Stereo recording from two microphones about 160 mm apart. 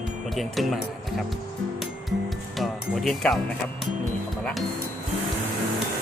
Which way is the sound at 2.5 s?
Centre (ahead or behind).